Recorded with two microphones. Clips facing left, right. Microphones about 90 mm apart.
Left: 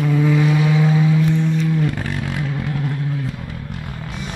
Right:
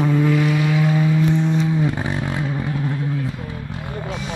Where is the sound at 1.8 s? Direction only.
15° right (ahead or behind).